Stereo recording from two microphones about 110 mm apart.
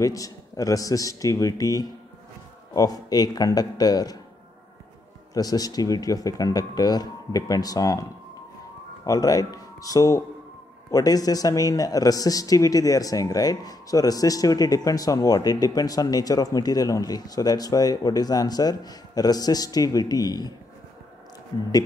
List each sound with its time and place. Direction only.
0.0 s speech: 30° left (ahead or behind)
5.3 s speech: 35° left (ahead or behind)
9.0 s speech: 35° left (ahead or behind)